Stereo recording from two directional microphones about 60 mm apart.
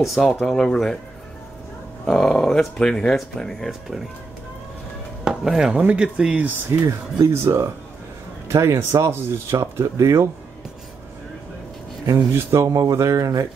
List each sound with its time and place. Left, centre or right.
0.0 s speech: centre
2.0 s speech: centre
5.2 s speech: centre
5.7 s speech: centre
6.9 s speech: right
9.8 s speech: right
12.3 s speech: right